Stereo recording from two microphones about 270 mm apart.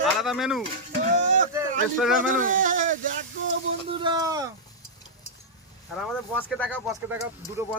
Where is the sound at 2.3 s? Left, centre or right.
Right.